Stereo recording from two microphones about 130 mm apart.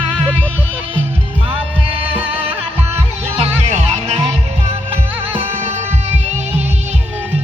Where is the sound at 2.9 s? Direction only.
50° right (ahead or behind).